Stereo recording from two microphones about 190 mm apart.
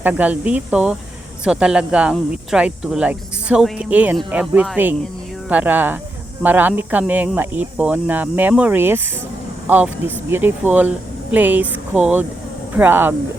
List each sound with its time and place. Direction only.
0.0 s speech: 5° right (ahead or behind)